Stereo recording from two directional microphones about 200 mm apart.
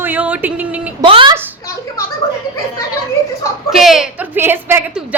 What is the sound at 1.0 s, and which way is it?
Speech, 25° right (ahead or behind).